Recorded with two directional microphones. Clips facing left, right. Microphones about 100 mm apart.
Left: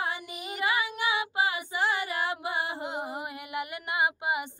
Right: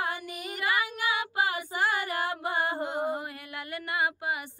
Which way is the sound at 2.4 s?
50° right (ahead or behind).